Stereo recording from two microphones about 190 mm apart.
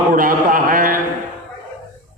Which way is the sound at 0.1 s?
45° right (ahead or behind).